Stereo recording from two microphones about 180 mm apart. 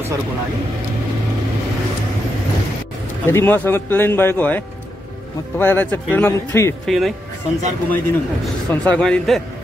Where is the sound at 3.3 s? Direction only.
15° left (ahead or behind).